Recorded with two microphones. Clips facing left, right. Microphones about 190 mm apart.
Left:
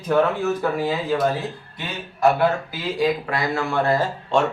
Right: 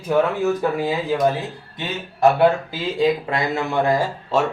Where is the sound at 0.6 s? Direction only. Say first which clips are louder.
Right 1 dB; 15° right (ahead or behind).